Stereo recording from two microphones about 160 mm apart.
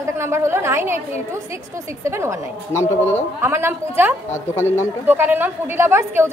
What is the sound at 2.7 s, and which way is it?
Speech, 15° left (ahead or behind).